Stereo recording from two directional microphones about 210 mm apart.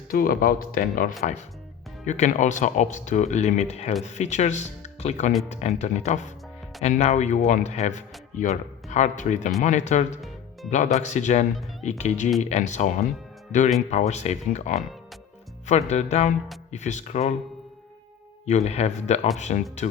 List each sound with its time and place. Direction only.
0.1 s speech: 45° left (ahead or behind)
13.9 s speech: 35° left (ahead or behind)
18.4 s speech: 30° left (ahead or behind)